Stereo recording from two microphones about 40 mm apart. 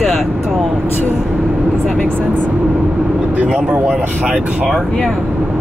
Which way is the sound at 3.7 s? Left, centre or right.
Right.